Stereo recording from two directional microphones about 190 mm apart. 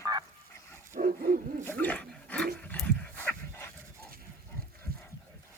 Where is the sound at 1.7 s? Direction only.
10° left (ahead or behind).